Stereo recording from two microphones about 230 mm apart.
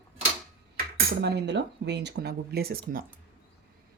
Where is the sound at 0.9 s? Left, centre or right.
Right.